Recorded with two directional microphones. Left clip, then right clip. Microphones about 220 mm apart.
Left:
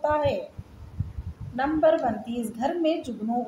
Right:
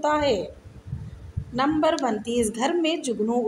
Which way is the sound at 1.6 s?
50° right (ahead or behind).